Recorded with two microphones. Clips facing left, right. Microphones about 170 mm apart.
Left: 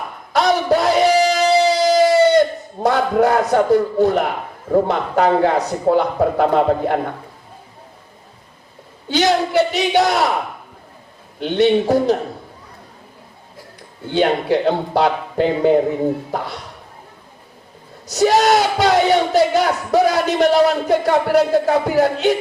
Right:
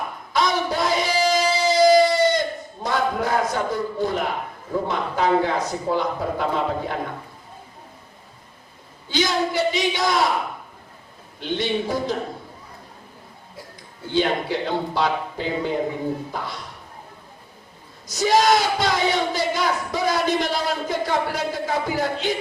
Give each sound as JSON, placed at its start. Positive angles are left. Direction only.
{"t": 0.3, "sound": "a sound", "side_deg": 65}
{"t": 2.8, "sound": "speech", "side_deg": 65}
{"t": 9.0, "sound": "speech", "side_deg": 65}
{"t": 11.3, "sound": "speech", "side_deg": 60}
{"t": 14.1, "sound": "speech", "side_deg": 60}
{"t": 18.1, "sound": "speech", "side_deg": 65}